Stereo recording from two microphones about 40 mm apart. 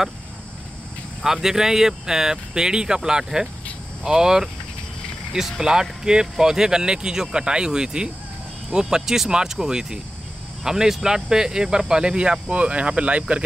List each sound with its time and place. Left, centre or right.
1.2 s speech: centre; by 13.4 s right